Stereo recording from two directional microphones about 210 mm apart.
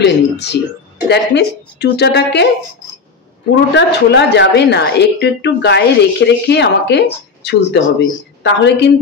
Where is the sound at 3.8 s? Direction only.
55° left (ahead or behind).